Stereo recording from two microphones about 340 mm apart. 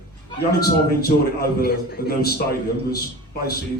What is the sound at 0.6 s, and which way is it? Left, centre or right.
A man's voice, left.